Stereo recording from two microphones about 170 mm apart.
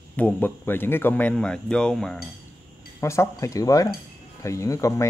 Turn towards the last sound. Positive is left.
turn(degrees=20)  # may be behind; listen again after turning